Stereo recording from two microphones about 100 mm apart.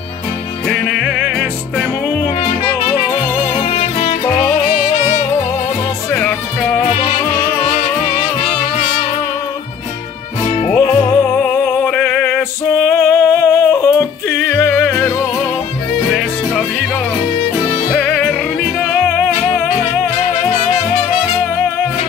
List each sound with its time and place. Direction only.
0.7 s music: 5° left (ahead or behind)
2.0 s music: 15° left (ahead or behind)
3.6 s music: 80° left
6.1 s music: 15° left (ahead or behind)
7.6 s music: 90° left
10.8 s music: 30° left (ahead or behind)
11.9 s music: 10° left (ahead or behind)
13.0 s yodeling: 25° left (ahead or behind)
14.7 s music: 25° left (ahead or behind)
16.1 s music: centre (ahead or behind)
17.6 s music: 10° left (ahead or behind)
18.9 s music: 15° left (ahead or behind)